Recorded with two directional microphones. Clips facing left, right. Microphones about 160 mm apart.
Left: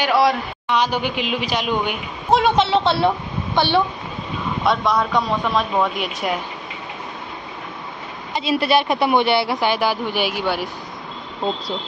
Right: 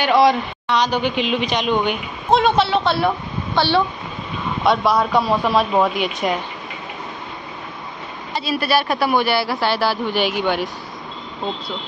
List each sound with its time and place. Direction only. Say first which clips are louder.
0.0 s a man's voice: right 2 dB; 5° left (ahead or behind)
4.6 s speech: right 3 dB; 5° right (ahead or behind)
8.3 s a woman's voice: left 2 dB; 20° left (ahead or behind)